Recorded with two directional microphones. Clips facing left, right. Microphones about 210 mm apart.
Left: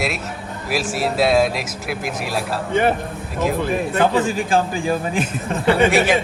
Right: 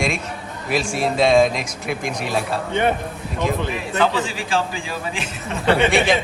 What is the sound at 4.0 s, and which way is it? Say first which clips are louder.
Speech: left 2 dB; 50° left (ahead or behind).